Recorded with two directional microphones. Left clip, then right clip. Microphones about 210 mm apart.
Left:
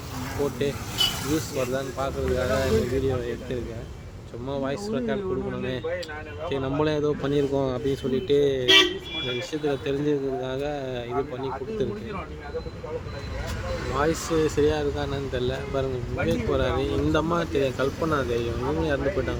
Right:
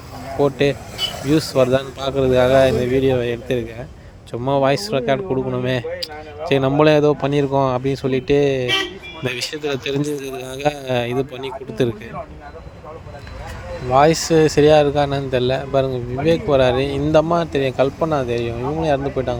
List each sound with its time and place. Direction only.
0.4 s speech: 35° right (ahead or behind)
10.1 s a man's voice: centre (ahead or behind)
10.6 s speech: 50° right (ahead or behind)
13.9 s speech: 35° right (ahead or behind)